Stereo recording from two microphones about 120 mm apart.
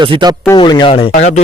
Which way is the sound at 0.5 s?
40° left (ahead or behind).